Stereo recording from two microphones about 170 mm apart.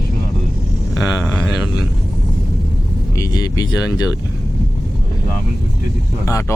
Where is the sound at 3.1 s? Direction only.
20° left (ahead or behind).